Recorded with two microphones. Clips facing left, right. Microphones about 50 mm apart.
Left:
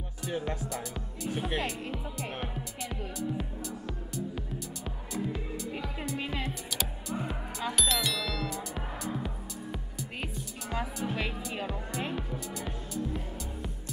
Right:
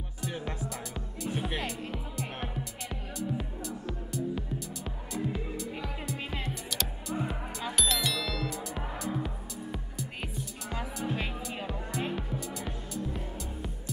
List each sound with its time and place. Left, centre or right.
0.2 s speech: centre
0.7 s music: centre